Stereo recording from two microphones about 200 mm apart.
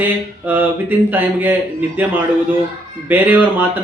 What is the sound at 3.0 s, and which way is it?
Mantra, 10° right (ahead or behind).